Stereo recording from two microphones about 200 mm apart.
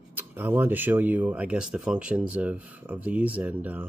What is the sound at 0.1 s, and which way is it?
Speech, 10° right (ahead or behind).